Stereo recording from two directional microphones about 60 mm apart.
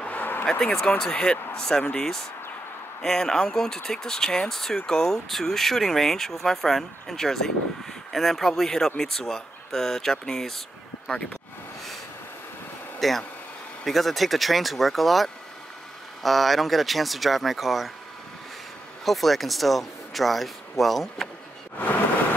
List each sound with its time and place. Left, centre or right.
0.0 s a sound: left
0.5 s speech: centre
13.0 s speech: centre
19.0 s speech: centre